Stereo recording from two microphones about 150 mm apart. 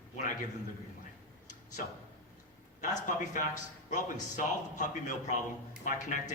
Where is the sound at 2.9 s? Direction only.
55° left (ahead or behind).